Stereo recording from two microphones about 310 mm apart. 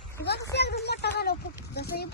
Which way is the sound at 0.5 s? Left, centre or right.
Left.